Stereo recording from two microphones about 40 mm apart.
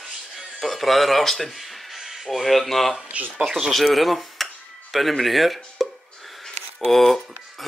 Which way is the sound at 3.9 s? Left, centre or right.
Centre.